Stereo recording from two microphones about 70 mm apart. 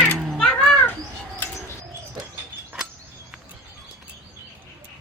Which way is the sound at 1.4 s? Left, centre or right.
Left.